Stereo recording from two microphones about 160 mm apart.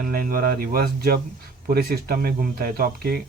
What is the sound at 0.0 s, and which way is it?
Speech, 65° right (ahead or behind).